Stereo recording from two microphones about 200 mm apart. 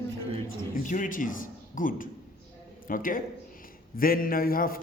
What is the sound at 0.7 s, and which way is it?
A man's voice, 40° left (ahead or behind).